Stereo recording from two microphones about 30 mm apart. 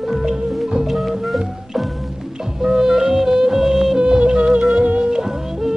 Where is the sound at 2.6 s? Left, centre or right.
Centre.